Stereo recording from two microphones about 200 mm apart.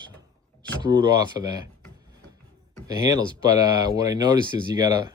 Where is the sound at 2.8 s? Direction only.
20° right (ahead or behind).